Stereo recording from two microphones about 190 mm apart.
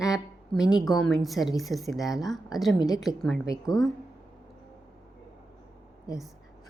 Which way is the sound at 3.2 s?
Centre (ahead or behind).